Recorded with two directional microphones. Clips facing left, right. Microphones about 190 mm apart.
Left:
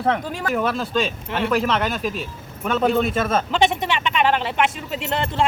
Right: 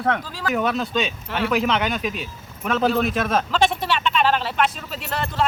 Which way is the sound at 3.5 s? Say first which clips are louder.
Left 1 dB; 20° left (ahead or behind).